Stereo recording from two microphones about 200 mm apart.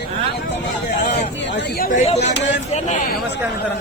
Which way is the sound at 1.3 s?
60° left (ahead or behind).